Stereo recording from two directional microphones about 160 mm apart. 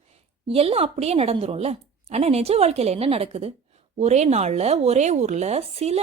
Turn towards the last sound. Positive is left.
turn(degrees=-40)  # may be behind; listen again after turning